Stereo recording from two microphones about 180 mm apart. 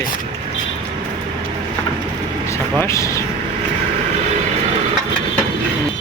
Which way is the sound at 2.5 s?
15° left (ahead or behind).